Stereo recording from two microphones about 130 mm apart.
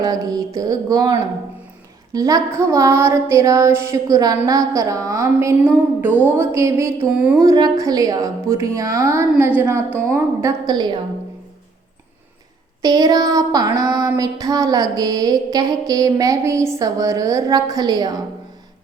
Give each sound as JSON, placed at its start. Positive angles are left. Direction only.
{"t": 0.0, "sound": "child singing", "side_deg": -30}
{"t": 10.1, "sound": "a woman's voice", "side_deg": -20}
{"t": 12.8, "sound": "child singing", "side_deg": -30}